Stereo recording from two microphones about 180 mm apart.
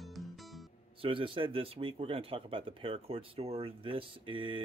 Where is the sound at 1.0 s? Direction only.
30° right (ahead or behind).